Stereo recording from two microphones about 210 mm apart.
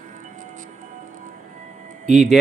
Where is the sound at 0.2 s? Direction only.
40° right (ahead or behind).